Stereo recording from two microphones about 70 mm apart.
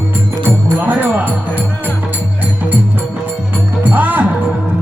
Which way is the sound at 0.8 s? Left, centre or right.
Right.